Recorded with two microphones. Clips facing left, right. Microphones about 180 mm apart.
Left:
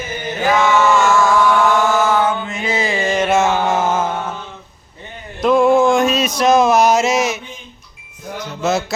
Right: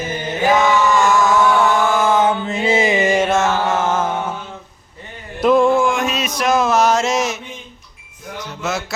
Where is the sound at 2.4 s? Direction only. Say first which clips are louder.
Right 4 dB; 30° right (ahead or behind).